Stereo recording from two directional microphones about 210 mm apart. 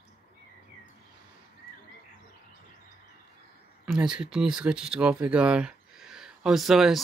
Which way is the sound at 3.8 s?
5° right (ahead or behind).